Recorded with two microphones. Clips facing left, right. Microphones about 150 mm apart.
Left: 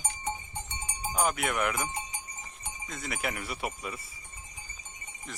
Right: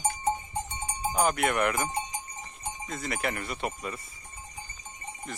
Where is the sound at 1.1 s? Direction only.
Centre (ahead or behind).